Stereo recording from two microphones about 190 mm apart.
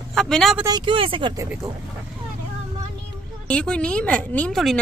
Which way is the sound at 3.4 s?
5° left (ahead or behind).